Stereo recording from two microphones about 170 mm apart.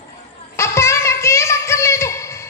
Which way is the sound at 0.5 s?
15° left (ahead or behind).